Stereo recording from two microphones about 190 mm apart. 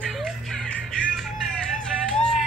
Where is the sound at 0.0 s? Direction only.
Centre (ahead or behind).